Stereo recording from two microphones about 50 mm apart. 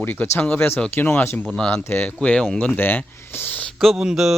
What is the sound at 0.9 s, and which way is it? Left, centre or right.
Speech, left.